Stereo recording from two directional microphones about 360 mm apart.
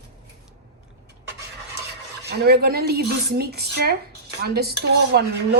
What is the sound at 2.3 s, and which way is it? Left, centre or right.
Speech, right.